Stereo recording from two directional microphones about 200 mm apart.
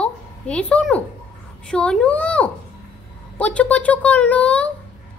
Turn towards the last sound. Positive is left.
turn(degrees=5)  # may be behind; listen again after turning